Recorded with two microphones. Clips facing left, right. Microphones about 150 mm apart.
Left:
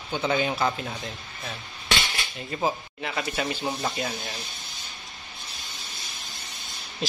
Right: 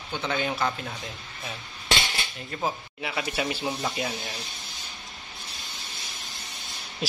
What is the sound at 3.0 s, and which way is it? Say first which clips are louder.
Speech: even; 5° right (ahead or behind).